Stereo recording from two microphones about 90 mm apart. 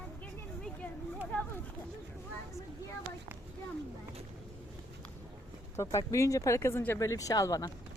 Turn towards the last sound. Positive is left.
turn(degrees=40)  # may be behind; listen again after turning